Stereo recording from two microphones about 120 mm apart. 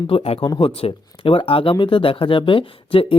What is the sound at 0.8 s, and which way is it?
Speech, 50° left (ahead or behind).